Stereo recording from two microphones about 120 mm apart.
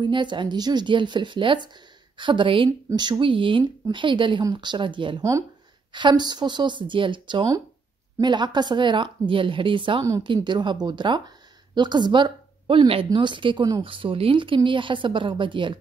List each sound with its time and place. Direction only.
0.0 s speech: 40° right (ahead or behind)